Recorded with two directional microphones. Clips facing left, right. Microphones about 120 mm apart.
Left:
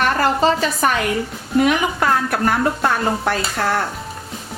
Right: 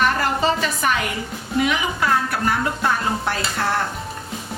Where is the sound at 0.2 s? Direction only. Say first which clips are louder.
Left 4 dB; 35° left (ahead or behind).